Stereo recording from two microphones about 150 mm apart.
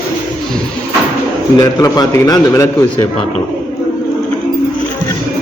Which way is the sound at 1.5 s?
25° left (ahead or behind).